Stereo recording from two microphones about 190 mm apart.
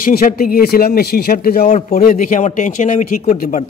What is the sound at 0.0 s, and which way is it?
A man's voice, 50° left (ahead or behind).